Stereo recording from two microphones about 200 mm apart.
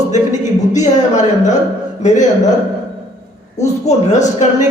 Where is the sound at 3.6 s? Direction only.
35° left (ahead or behind).